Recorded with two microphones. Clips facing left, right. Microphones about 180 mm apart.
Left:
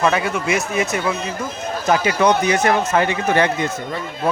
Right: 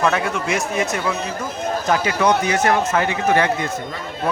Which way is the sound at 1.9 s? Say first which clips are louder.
Left 2 dB; 20° left (ahead or behind).